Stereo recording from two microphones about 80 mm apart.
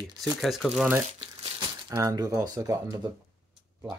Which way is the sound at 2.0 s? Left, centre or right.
Right.